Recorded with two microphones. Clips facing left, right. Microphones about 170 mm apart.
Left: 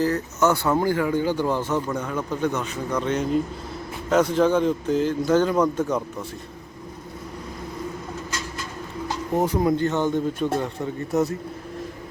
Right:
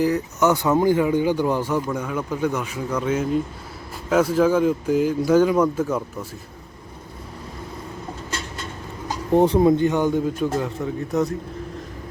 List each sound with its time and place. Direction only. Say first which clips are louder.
0.0 s a man's voice: right 2 dB; 15° right (ahead or behind)
8.3 s a sound: even; 30° right (ahead or behind)
9.3 s a man's voice: right 6 dB; 30° right (ahead or behind); by 11.3 s 5° left (ahead or behind)